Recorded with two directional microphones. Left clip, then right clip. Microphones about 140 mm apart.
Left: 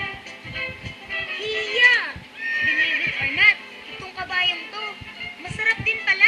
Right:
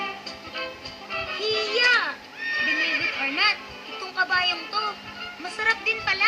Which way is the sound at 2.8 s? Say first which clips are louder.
Left 3 dB; 10° right (ahead or behind).